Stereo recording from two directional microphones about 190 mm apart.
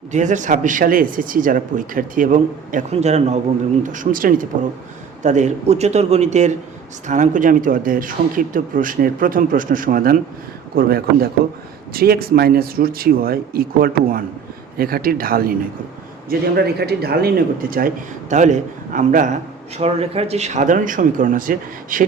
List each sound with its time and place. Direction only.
0.1 s a man's voice: 40° right (ahead or behind)